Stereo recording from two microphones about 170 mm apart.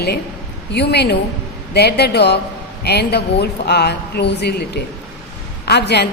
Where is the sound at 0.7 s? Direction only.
75° left (ahead or behind).